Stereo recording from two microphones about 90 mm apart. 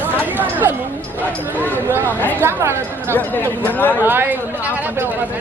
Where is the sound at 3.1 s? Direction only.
20° left (ahead or behind).